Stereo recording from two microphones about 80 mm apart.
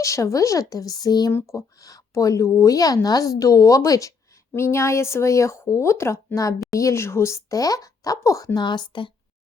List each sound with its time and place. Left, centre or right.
0.0 s speech: left
1.3 s speech: left
4.5 s speech: left
8.5 s a woman's voice: left